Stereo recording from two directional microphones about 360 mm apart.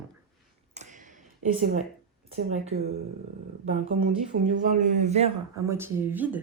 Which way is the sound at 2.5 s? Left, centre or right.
Centre.